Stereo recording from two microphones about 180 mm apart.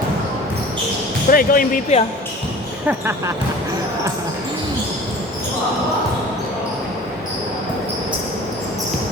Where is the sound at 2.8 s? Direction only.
15° right (ahead or behind).